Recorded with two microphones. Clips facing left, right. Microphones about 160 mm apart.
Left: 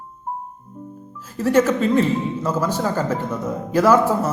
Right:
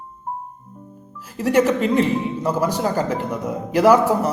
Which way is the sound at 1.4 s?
15° right (ahead or behind).